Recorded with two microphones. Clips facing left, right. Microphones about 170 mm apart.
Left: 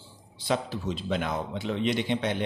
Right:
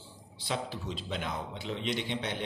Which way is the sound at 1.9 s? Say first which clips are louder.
Left 6 dB; 55° left (ahead or behind).